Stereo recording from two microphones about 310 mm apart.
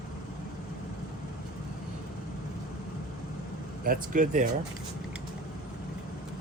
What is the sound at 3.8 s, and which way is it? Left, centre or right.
Speech, right.